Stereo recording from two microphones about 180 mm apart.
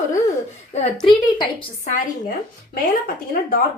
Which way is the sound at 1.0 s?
25° left (ahead or behind).